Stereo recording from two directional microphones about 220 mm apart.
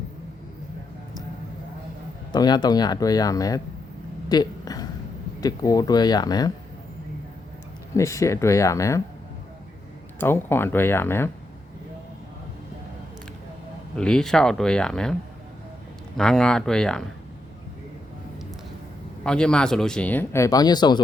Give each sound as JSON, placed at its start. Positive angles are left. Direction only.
{"t": 2.3, "sound": "speech", "side_deg": 20}
{"t": 4.3, "sound": "a sound", "side_deg": 15}
{"t": 5.4, "sound": "speech", "side_deg": 15}
{"t": 7.9, "sound": "speech", "side_deg": 15}
{"t": 10.2, "sound": "speech", "side_deg": 10}
{"t": 13.9, "sound": "speech", "side_deg": 5}
{"t": 16.1, "sound": "speech", "side_deg": 5}
{"t": 19.2, "sound": "speech", "side_deg": 5}